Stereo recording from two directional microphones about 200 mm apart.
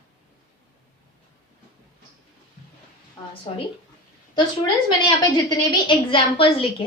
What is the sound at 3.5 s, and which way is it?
A woman's voice, 30° left (ahead or behind).